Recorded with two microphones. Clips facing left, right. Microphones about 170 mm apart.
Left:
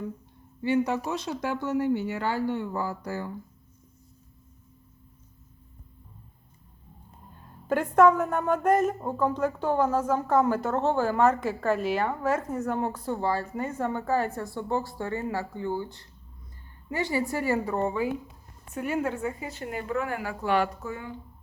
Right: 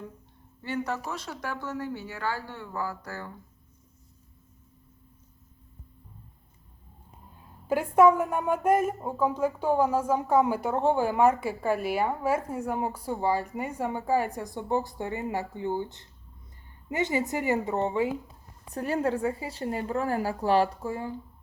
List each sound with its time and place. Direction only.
0.6 s speech: 15° left (ahead or behind)
7.7 s a woman's voice: 10° right (ahead or behind); by 21.2 s 30° right (ahead or behind)